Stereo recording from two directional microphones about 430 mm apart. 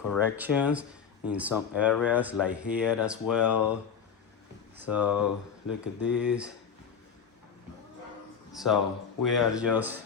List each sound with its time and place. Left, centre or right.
0.1 s speech: centre
5.0 s speech: left
5.8 s speech: centre
8.5 s speech: centre